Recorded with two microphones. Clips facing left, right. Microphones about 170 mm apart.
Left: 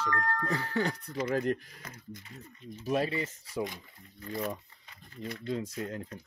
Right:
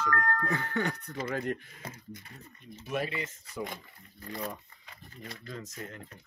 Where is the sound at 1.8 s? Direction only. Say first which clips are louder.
Right 2 dB; 30° right (ahead or behind).